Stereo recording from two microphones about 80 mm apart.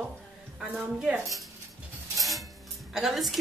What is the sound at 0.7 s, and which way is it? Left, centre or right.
Speech, centre.